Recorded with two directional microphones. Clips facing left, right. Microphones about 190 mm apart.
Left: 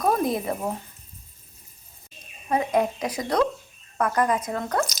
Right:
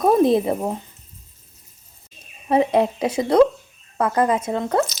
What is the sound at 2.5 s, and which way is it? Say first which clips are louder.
Speech: right 5 dB; 30° right (ahead or behind).